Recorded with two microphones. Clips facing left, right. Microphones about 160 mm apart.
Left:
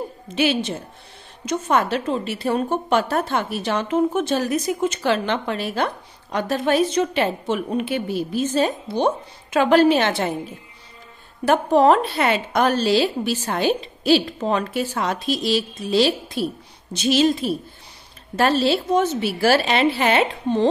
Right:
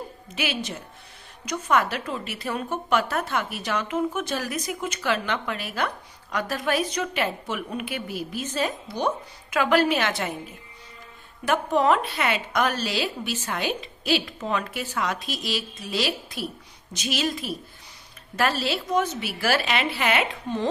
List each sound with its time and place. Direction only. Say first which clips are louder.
0.3 s a woman's voice: left 9 dB; 30° left (ahead or behind)